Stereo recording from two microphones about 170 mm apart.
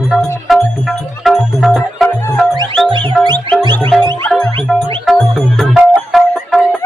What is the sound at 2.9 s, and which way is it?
Music, 30° right (ahead or behind).